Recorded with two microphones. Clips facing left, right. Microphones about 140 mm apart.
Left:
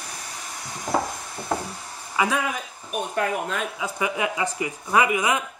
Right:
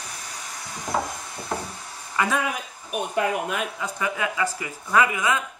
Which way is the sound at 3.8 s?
15° left (ahead or behind).